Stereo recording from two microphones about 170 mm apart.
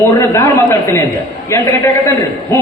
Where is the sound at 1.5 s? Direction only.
15° left (ahead or behind).